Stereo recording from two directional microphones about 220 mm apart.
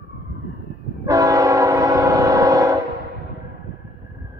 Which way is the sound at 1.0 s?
15° right (ahead or behind).